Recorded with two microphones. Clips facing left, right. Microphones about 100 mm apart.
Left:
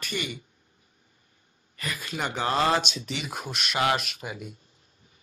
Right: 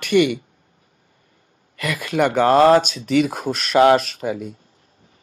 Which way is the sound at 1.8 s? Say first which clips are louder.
Right 12 dB; 70° right (ahead or behind).